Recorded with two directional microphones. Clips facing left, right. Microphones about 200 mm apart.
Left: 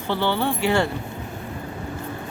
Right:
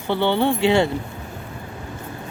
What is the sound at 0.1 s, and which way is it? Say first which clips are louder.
Speech: right 4 dB; 20° right (ahead or behind).